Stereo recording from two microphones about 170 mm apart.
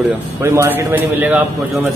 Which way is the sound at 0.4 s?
15° right (ahead or behind).